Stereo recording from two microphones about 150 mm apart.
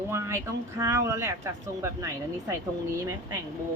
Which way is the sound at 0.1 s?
15° right (ahead or behind).